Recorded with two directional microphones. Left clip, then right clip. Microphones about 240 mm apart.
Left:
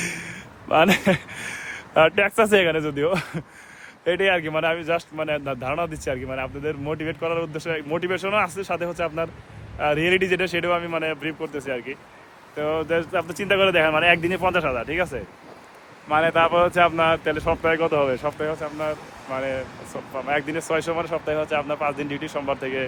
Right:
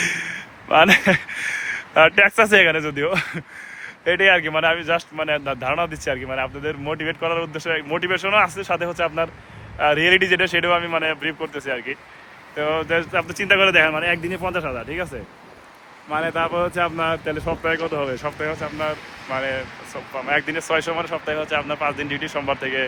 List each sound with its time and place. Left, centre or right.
0.0 s speech: centre